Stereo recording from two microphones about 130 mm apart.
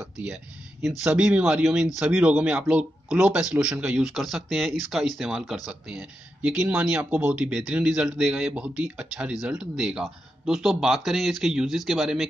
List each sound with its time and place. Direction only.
0.8 s speech: 5° right (ahead or behind)